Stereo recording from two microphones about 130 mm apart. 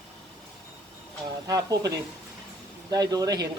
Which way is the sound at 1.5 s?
30° right (ahead or behind).